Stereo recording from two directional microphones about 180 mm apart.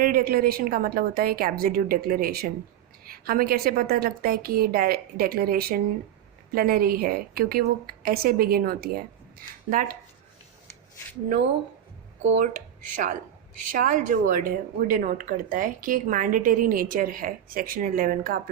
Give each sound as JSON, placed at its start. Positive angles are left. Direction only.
{"t": 0.0, "sound": "a woman's voice", "side_deg": -55}
{"t": 12.2, "sound": "a woman's voice", "side_deg": -45}